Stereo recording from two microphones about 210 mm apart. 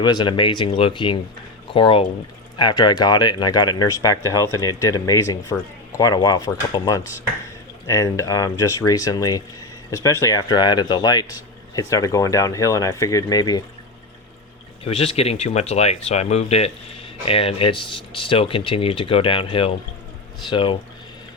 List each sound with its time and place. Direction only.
0.0 s speech: 20° left (ahead or behind)
14.8 s speech: 30° left (ahead or behind)